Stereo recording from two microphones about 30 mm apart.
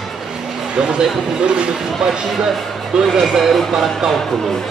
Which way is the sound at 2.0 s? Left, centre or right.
Right.